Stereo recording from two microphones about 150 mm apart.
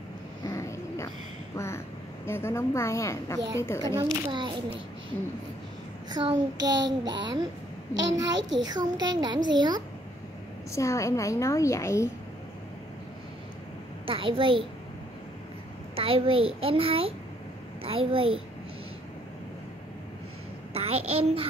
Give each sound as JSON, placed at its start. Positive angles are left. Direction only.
{"t": 0.4, "sound": "a sound", "side_deg": 20}
{"t": 2.2, "sound": "a woman's voice", "side_deg": 15}
{"t": 3.9, "sound": "a child's voice", "side_deg": -30}
{"t": 6.1, "sound": "a child's voice", "side_deg": -25}
{"t": 10.7, "sound": "a woman's voice", "side_deg": 20}
{"t": 14.0, "sound": "a child's voice", "side_deg": -35}
{"t": 16.0, "sound": "a child's voice", "side_deg": -40}
{"t": 20.7, "sound": "a child's voice", "side_deg": -40}